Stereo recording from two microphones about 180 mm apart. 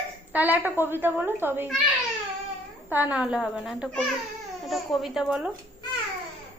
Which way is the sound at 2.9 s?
10° right (ahead or behind).